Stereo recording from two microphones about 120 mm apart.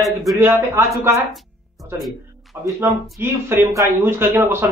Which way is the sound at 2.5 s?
20° right (ahead or behind).